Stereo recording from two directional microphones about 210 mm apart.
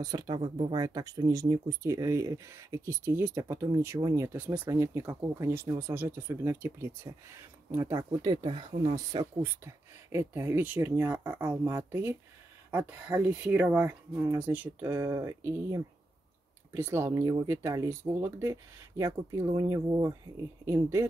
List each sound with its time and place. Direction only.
0.0 s speech: 15° right (ahead or behind)